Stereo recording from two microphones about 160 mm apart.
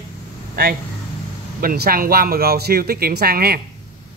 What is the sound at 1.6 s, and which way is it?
Speech, 70° right (ahead or behind).